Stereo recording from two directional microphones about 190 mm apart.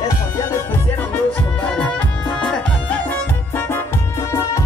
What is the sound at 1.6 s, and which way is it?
Music, 5° left (ahead or behind).